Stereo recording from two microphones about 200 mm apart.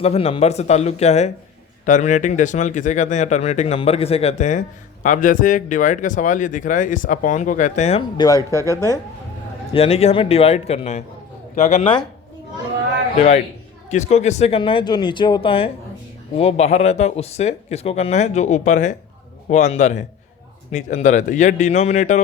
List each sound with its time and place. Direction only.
0.0 s speech: 30° left (ahead or behind)
8.2 s speech: 20° left (ahead or behind)
9.7 s speech: 30° left (ahead or behind)
13.9 s speech: 35° left (ahead or behind)